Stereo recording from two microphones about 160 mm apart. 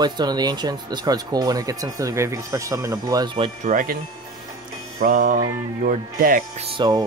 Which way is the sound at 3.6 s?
60° right (ahead or behind).